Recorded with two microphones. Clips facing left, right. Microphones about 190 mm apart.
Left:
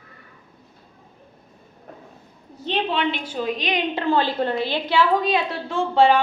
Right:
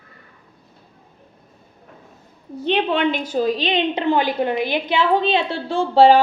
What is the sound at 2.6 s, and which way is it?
A woman's voice, 60° right (ahead or behind).